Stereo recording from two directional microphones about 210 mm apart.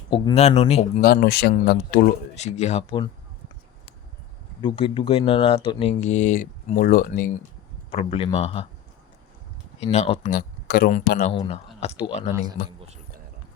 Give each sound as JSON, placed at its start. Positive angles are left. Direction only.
{"t": 0.1, "sound": "speech", "side_deg": 25}
{"t": 1.0, "sound": "speech", "side_deg": 45}
{"t": 4.6, "sound": "speech", "side_deg": 25}
{"t": 7.9, "sound": "speech", "side_deg": 25}
{"t": 9.8, "sound": "speech", "side_deg": 30}
{"t": 11.3, "sound": "speech", "side_deg": 25}